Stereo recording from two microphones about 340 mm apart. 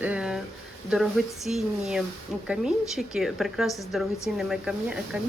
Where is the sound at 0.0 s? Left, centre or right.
Centre.